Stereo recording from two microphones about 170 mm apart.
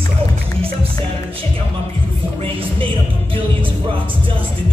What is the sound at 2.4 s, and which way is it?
Music, 30° right (ahead or behind).